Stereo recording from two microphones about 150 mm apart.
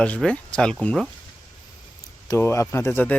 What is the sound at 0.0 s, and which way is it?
Speech, 5° left (ahead or behind).